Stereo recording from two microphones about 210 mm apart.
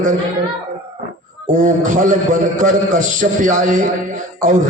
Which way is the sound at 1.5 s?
40° right (ahead or behind).